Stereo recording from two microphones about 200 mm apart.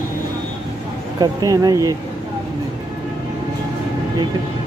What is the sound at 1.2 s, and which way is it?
Speech, 20° right (ahead or behind).